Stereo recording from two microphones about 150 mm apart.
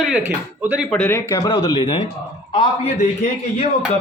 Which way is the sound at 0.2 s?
10° right (ahead or behind).